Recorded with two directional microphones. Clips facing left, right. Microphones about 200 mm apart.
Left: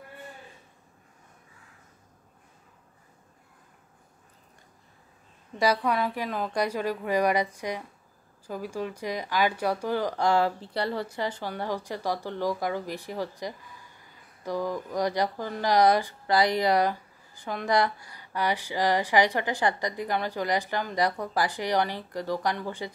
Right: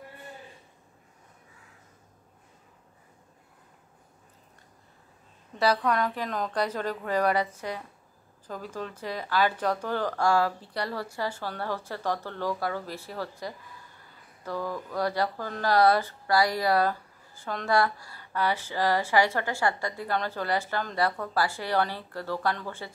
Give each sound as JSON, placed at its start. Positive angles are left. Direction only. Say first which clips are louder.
{"t": 5.6, "sound": "speech", "louder": "even", "side_deg": 10}